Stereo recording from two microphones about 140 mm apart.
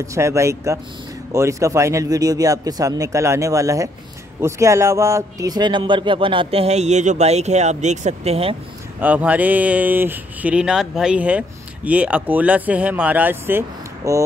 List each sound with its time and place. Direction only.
0.0 s speech: 20° right (ahead or behind); by 8.5 s 45° right (ahead or behind)
9.0 s speech: 10° right (ahead or behind)